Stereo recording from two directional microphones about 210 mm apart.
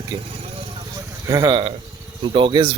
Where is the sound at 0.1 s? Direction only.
20° right (ahead or behind).